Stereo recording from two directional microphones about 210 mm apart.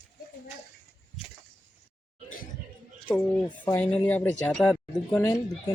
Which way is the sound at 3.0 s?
5° left (ahead or behind).